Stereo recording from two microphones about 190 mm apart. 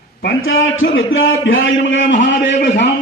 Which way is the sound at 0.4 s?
90° left.